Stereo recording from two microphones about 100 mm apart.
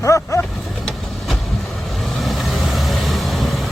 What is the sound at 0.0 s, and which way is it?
Vehicle, 30° left (ahead or behind).